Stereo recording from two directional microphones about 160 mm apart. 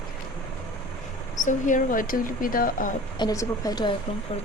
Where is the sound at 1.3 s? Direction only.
50° left (ahead or behind).